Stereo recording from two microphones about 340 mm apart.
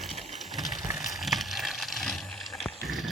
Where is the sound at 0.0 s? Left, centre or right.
Centre.